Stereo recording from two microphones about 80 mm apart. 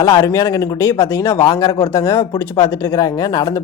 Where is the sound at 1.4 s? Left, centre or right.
Left.